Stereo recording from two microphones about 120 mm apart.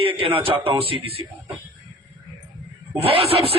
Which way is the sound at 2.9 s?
55° right (ahead or behind).